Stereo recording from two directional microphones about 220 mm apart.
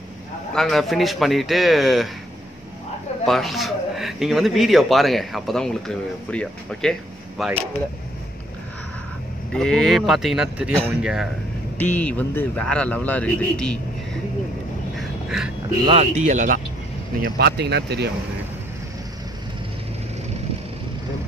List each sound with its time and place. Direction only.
0.6 s speech: centre (ahead or behind)
3.3 s speech: centre (ahead or behind)
9.5 s speech: 5° left (ahead or behind)
11.8 s a man's voice: 5° left (ahead or behind)
15.0 s duck: centre (ahead or behind)
15.8 s speech: 25° right (ahead or behind)
17.2 s speech: 50° right (ahead or behind)